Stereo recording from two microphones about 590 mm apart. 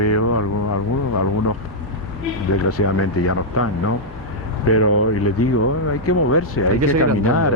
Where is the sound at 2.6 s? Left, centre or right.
Left.